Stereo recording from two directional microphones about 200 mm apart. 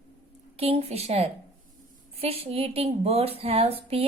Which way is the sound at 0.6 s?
30° right (ahead or behind).